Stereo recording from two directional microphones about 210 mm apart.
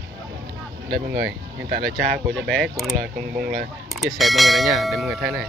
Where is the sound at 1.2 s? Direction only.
50° right (ahead or behind).